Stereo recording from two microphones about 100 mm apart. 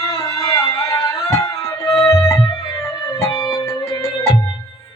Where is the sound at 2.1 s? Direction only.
35° left (ahead or behind).